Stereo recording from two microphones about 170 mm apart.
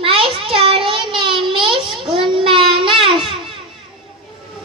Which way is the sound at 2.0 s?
30° right (ahead or behind).